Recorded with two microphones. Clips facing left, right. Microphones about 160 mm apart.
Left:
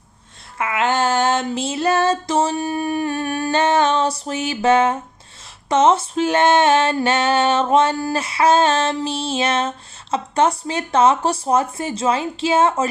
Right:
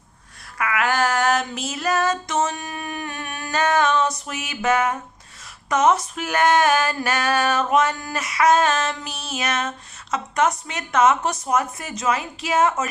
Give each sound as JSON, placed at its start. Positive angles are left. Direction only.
{"t": 0.6, "sound": "female singing", "side_deg": 25}